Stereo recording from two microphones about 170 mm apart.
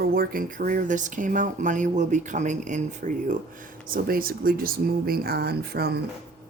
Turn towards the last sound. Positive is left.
turn(degrees=-70)  # may be behind; listen again after turning